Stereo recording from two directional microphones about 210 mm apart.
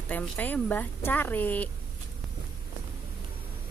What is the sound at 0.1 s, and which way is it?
Speech, 10° left (ahead or behind).